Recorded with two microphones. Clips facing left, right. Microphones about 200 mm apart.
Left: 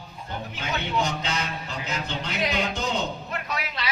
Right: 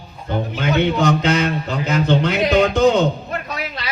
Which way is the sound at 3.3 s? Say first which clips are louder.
Right 5 dB; 40° right (ahead or behind).